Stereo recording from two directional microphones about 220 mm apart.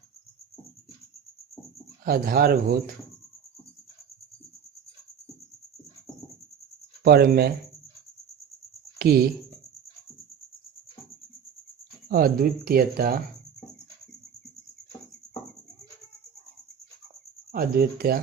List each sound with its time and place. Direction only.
2.0 s speech: 40° right (ahead or behind)
7.0 s speech: 45° right (ahead or behind)
9.0 s speech: 45° right (ahead or behind)
12.0 s speech: 40° right (ahead or behind)
17.5 s speech: 40° right (ahead or behind)